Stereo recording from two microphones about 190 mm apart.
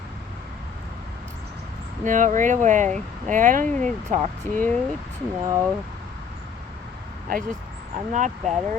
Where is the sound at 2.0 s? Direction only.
40° right (ahead or behind).